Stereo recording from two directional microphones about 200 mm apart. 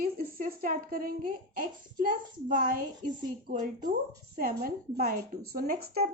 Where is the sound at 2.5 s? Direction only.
40° right (ahead or behind).